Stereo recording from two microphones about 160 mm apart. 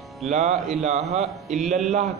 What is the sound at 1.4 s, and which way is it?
Speech, centre (ahead or behind).